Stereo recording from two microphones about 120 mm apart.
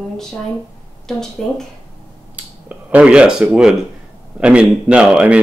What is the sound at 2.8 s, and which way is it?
A woman's voice, 10° right (ahead or behind).